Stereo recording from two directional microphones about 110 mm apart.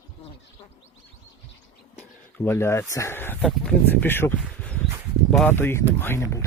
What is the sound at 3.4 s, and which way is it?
Speech, 5° left (ahead or behind).